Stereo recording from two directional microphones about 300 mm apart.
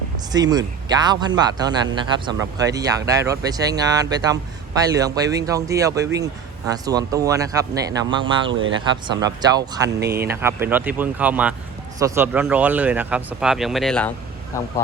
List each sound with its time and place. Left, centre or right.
0.3 s speech: centre
8.4 s speech: right
9.0 s speech: centre
10.0 s speech: right
10.2 s speech: centre